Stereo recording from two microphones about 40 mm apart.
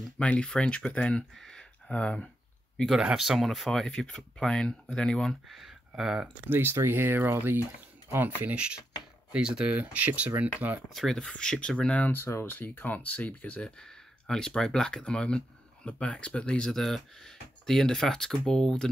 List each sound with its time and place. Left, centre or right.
0.4 s speech: left
3.3 s speech: centre
3.7 s speech: centre
5.5 s speech: centre
6.4 s speech: right
8.5 s speech: right
9.8 s speech: right
10.4 s speech: right
10.9 s speech: centre
11.1 s speech: left
12.1 s speech: left
13.6 s speech: centre
16.7 s speech: centre